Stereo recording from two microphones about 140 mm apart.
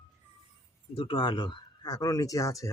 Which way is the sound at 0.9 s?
40° left (ahead or behind).